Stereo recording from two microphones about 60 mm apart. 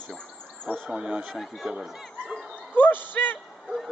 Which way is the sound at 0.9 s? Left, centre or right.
Centre.